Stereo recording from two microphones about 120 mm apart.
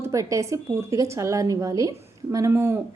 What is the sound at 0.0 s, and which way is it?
Speech, 25° right (ahead or behind).